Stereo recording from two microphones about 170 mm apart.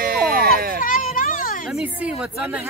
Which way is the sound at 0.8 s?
50° left (ahead or behind).